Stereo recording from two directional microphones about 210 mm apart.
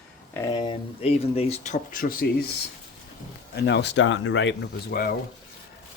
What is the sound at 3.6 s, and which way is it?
Speech, 55° left (ahead or behind).